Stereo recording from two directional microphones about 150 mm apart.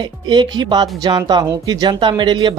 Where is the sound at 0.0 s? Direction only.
30° right (ahead or behind).